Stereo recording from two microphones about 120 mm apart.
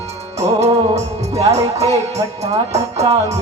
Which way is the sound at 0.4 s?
65° right (ahead or behind).